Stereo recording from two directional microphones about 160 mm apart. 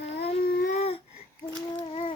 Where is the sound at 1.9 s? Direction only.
35° left (ahead or behind).